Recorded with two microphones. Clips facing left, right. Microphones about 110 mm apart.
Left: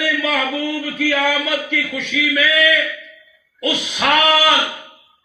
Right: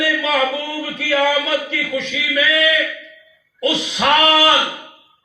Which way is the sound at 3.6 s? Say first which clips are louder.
Right 2 dB; 25° right (ahead or behind).